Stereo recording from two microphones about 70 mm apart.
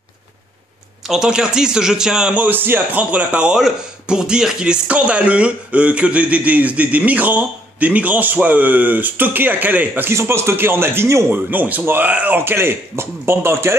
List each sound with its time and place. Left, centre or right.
1.0 s a man's voice: centre
2.4 s speech: right
10.1 s a man's voice: right
11.3 s speech: right
12.4 s a man's voice: right